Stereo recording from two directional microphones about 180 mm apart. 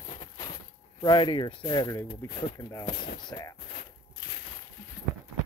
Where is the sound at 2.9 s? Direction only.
55° left (ahead or behind).